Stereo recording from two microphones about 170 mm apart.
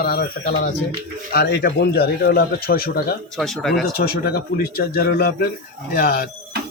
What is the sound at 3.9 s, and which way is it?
Speech, 65° left (ahead or behind).